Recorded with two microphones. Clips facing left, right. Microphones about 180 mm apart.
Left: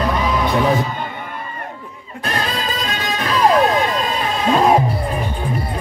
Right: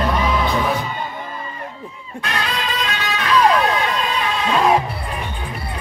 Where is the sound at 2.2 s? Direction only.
35° left (ahead or behind).